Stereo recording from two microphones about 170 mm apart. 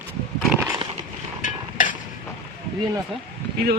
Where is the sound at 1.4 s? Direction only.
50° left (ahead or behind).